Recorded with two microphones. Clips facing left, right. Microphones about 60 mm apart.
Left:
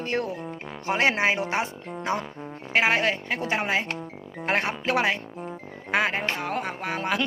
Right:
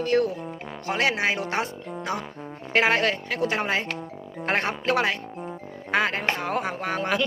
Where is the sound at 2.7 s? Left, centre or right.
Centre.